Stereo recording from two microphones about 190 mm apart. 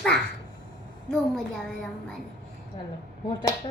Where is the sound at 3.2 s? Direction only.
25° left (ahead or behind).